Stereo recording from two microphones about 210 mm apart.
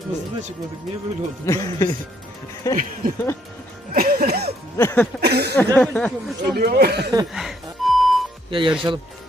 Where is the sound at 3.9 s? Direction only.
45° right (ahead or behind).